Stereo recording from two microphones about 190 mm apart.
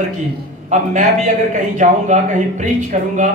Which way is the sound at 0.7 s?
40° right (ahead or behind).